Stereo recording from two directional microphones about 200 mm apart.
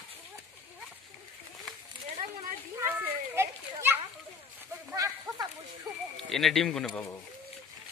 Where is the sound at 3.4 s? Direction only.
10° right (ahead or behind).